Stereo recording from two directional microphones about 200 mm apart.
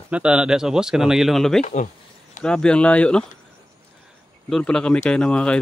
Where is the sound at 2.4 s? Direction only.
5° left (ahead or behind).